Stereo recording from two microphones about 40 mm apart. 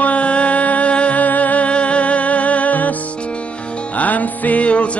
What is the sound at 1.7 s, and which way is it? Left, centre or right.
Music, left.